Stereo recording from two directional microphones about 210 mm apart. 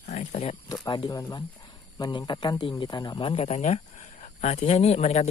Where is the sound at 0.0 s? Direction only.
35° left (ahead or behind).